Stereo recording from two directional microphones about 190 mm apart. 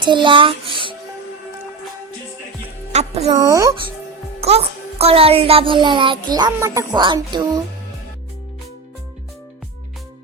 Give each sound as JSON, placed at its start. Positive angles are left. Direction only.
{"t": 0.0, "sound": "a child's voice", "side_deg": -25}
{"t": 2.9, "sound": "speech", "side_deg": -35}
{"t": 3.3, "sound": "speech", "side_deg": -15}
{"t": 4.4, "sound": "a child's voice", "side_deg": -30}